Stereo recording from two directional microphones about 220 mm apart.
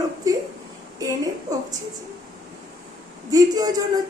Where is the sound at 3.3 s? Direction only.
15° right (ahead or behind).